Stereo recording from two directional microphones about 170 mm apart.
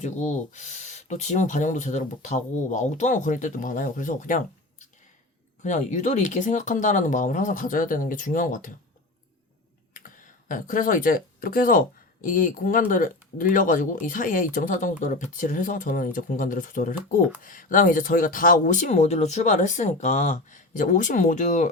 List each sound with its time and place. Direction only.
0.0 s speech: 45° left (ahead or behind)
5.6 s speech: 45° left (ahead or behind)
9.9 s speech: 50° left (ahead or behind)